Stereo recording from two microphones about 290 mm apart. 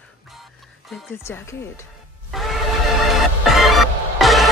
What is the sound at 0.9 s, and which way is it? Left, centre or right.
Speech, centre.